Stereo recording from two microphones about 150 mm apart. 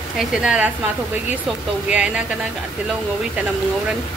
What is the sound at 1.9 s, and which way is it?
Speech, 5° right (ahead or behind).